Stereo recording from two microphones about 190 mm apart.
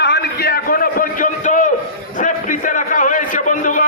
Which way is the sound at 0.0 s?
60° left (ahead or behind).